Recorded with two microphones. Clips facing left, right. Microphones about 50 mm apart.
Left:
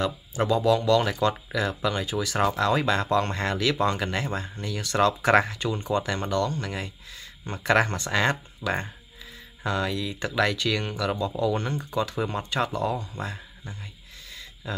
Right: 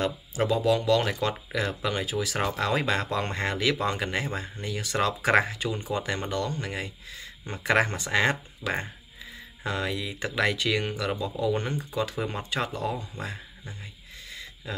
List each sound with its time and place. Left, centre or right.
0.4 s speech: centre
2.1 s speech: centre
11.5 s speech: centre